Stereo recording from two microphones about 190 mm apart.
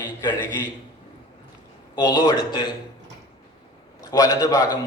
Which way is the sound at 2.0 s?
20° left (ahead or behind).